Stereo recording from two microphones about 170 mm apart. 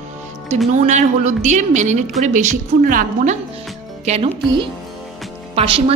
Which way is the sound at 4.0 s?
35° right (ahead or behind).